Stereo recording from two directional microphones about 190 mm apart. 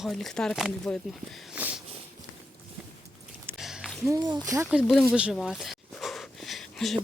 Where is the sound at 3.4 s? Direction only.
5° right (ahead or behind).